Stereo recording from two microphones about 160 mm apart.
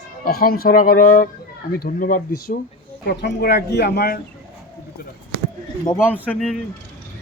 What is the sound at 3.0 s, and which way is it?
Speech, 90° left.